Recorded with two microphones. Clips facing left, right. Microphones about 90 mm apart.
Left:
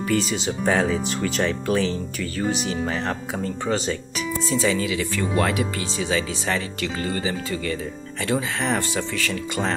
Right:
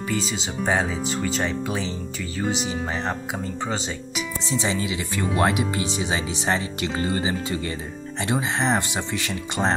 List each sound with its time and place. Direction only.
0.1 s speech: centre (ahead or behind)
2.7 s speech: 15° right (ahead or behind)
4.5 s speech: 25° right (ahead or behind)